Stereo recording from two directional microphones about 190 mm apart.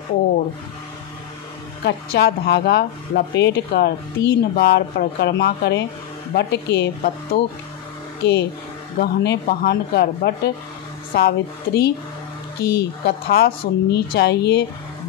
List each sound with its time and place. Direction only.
1.9 s a woman's voice: 60° left (ahead or behind)
8.2 s a woman's voice: 60° left (ahead or behind)